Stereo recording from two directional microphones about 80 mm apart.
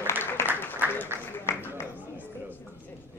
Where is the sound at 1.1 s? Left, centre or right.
Left.